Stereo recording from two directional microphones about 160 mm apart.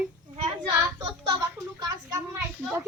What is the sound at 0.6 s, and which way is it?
Speech, 25° right (ahead or behind).